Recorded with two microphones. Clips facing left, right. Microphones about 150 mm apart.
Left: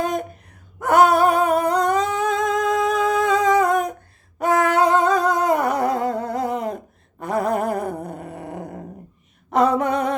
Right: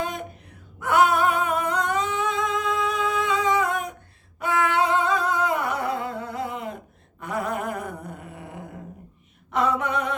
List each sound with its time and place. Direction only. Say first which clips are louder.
0.0 s gasp: left 6 dB; 45° left (ahead or behind)
0.8 s humming: left 5 dB; 40° left (ahead or behind)
7.2 s a sound: left 7 dB; 40° left (ahead or behind)